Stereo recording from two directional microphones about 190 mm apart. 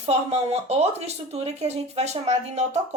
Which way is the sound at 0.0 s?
35° right (ahead or behind).